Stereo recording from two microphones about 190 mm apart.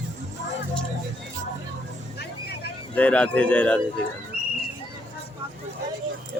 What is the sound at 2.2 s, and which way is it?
Vehicle, 60° left (ahead or behind).